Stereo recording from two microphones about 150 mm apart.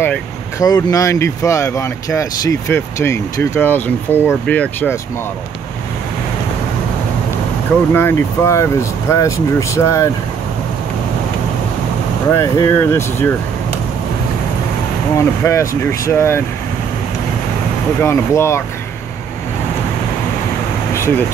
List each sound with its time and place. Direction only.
0.6 s speech: 25° left (ahead or behind)
7.9 s speech: 15° left (ahead or behind)
12.3 s speech: 20° left (ahead or behind)
15.1 s speech: 20° left (ahead or behind)
18.0 s speech: 20° left (ahead or behind)
20.9 s a sound: 15° left (ahead or behind)